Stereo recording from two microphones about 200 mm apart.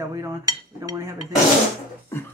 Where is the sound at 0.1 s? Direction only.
15° right (ahead or behind).